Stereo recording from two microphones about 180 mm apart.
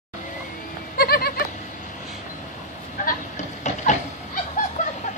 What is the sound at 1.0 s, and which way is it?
Goat, 60° left (ahead or behind).